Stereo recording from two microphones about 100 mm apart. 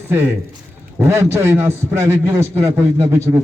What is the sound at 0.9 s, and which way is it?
A man's voice, 25° right (ahead or behind).